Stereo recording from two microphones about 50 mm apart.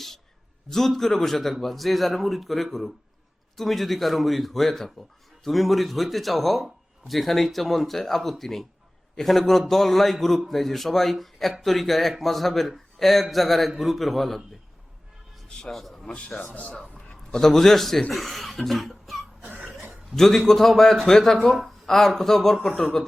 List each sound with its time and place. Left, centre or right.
0.7 s a man's voice: centre
15.7 s a man's voice: centre
16.1 s a man's voice: left
17.3 s a man's voice: centre
18.1 s cough: centre
19.4 s cough: right
20.1 s a man's voice: centre